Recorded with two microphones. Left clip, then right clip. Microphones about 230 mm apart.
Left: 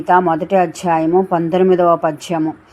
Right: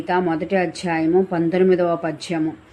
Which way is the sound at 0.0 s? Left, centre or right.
Centre.